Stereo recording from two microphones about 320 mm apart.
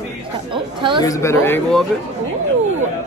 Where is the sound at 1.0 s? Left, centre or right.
Centre.